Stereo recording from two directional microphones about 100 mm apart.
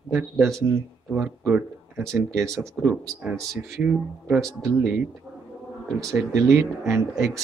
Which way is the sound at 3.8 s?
10° right (ahead or behind).